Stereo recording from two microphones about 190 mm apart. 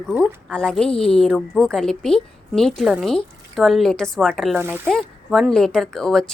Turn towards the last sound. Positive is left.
turn(degrees=5)  # may be behind; listen again after turning